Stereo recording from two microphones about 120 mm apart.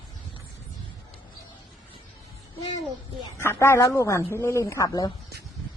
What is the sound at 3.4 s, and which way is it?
Speech, 20° left (ahead or behind).